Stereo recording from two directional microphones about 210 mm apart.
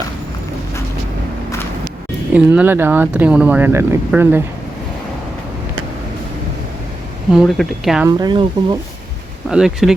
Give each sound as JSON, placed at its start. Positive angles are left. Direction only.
{"t": 2.3, "sound": "speech", "side_deg": -5}
{"t": 7.3, "sound": "speech", "side_deg": 0}
{"t": 8.0, "sound": "speech", "side_deg": -20}
{"t": 9.5, "sound": "speech", "side_deg": -5}